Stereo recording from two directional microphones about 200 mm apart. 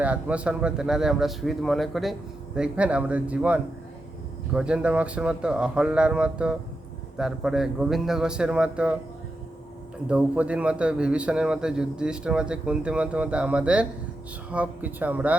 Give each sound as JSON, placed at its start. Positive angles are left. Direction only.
{"t": 0.0, "sound": "a man's voice", "side_deg": -5}
{"t": 10.1, "sound": "a man's voice", "side_deg": -5}